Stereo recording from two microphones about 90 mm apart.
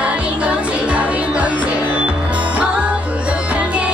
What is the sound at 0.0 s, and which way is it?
Music, 15° right (ahead or behind).